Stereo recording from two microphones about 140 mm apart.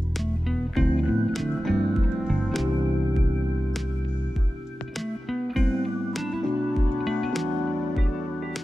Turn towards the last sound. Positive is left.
turn(degrees=0)  # may be behind; listen again after turning